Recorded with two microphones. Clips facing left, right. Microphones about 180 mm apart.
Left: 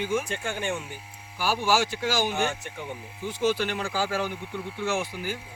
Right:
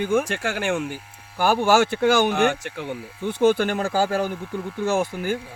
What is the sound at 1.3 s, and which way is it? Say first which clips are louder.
Speech: right 7 dB; 55° right (ahead or behind).